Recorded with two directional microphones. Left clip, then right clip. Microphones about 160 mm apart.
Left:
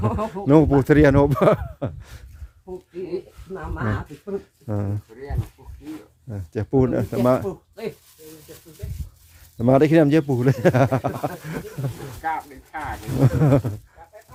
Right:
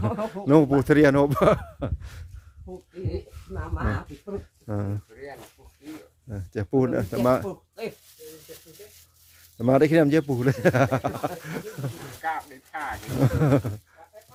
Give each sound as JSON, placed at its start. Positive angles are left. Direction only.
{"t": 0.0, "sound": "speech", "side_deg": 0}
{"t": 4.6, "sound": "speech", "side_deg": 5}
{"t": 6.2, "sound": "speech", "side_deg": 5}
{"t": 9.6, "sound": "speech", "side_deg": 10}
{"t": 12.2, "sound": "speech", "side_deg": -25}
{"t": 13.1, "sound": "speech", "side_deg": 5}